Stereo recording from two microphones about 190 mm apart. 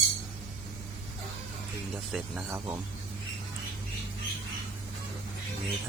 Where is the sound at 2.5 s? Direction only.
10° right (ahead or behind).